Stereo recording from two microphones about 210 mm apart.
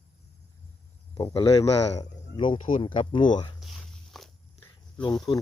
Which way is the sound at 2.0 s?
25° left (ahead or behind).